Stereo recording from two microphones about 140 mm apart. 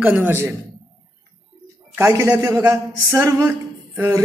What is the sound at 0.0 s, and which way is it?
Speech, 10° right (ahead or behind).